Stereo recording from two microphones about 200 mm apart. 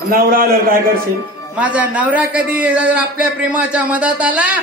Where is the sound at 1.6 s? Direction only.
5° right (ahead or behind).